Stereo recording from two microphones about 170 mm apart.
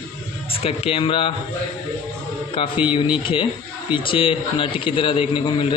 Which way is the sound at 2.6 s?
30° left (ahead or behind).